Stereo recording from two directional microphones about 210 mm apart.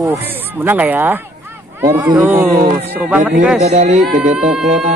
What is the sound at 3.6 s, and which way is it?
Speech, 30° right (ahead or behind).